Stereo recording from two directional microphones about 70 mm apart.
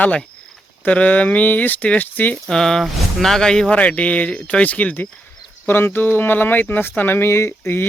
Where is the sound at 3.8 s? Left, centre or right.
Centre; by 7.8 s left.